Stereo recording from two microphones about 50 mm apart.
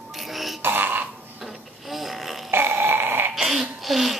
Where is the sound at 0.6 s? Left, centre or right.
Right.